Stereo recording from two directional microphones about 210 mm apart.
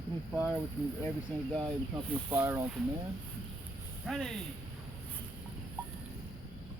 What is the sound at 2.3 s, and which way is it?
Speech, 10° right (ahead or behind).